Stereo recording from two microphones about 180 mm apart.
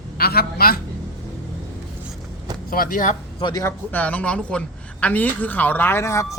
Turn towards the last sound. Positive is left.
turn(degrees=15)  # may be behind; listen again after turning